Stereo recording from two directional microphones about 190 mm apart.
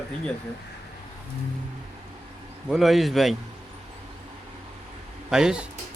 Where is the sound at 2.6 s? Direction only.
Centre (ahead or behind).